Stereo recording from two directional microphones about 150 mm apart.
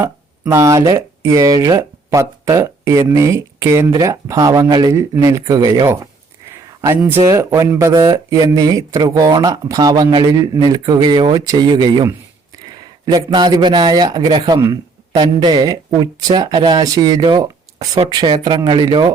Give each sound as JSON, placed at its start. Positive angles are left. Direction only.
{"t": 0.0, "sound": "speech", "side_deg": -20}